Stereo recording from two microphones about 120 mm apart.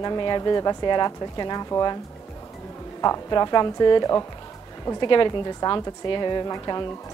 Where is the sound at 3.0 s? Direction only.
30° left (ahead or behind).